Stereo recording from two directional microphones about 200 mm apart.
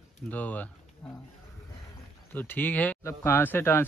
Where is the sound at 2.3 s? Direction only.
10° left (ahead or behind).